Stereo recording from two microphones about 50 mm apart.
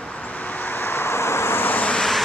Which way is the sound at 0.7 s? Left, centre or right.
Left.